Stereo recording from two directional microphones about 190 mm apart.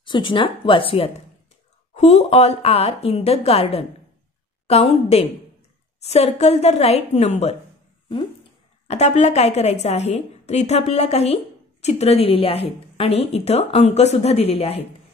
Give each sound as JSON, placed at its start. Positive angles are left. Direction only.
{"t": 0.0, "sound": "a woman's voice", "side_deg": 25}
{"t": 8.8, "sound": "a woman's voice", "side_deg": 35}